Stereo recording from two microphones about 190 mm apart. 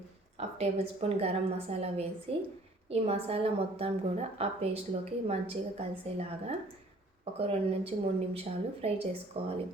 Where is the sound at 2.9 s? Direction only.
30° right (ahead or behind).